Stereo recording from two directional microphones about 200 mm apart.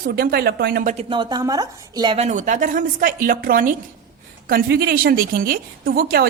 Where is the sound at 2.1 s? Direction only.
35° right (ahead or behind).